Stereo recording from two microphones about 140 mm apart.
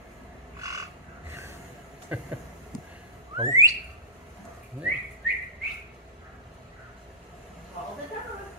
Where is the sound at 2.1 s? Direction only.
10° right (ahead or behind).